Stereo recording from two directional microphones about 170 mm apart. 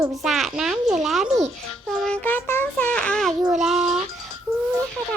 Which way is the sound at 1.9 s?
5° left (ahead or behind).